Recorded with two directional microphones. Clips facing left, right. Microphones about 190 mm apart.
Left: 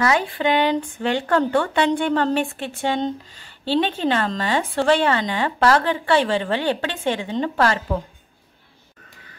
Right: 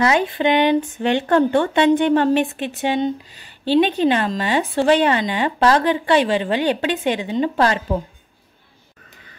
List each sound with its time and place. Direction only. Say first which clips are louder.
0.0 s a woman's voice: right 3 dB; 20° right (ahead or behind)